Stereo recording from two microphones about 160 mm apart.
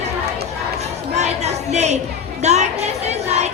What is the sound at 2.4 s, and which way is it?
Children playing, 45° right (ahead or behind).